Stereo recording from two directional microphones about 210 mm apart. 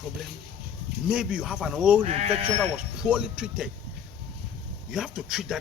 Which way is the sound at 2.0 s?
25° right (ahead or behind).